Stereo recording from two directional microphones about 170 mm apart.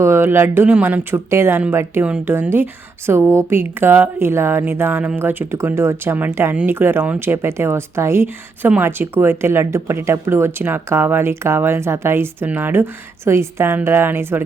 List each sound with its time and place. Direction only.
0.0 s speech: 15° right (ahead or behind)